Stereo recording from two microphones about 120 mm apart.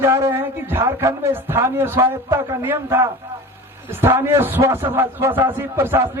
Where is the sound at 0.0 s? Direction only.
25° right (ahead or behind).